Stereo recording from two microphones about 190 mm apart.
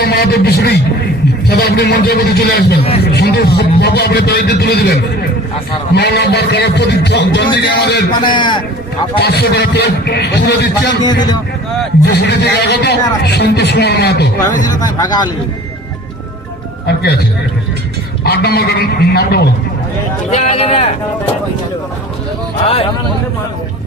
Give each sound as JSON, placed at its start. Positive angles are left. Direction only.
{"t": 0.0, "sound": "a man's voice", "side_deg": 60}
{"t": 8.2, "sound": "a man's voice", "side_deg": 25}
{"t": 9.1, "sound": "a man's voice", "side_deg": 55}
{"t": 11.0, "sound": "a man's voice", "side_deg": 20}
{"t": 12.0, "sound": "a man's voice", "side_deg": 60}
{"t": 14.8, "sound": "a man's voice", "side_deg": 20}
{"t": 16.8, "sound": "a man's voice", "side_deg": 60}
{"t": 18.2, "sound": "a man's voice", "side_deg": 55}
{"t": 20.3, "sound": "speech", "side_deg": 35}
{"t": 22.6, "sound": "speech", "side_deg": 30}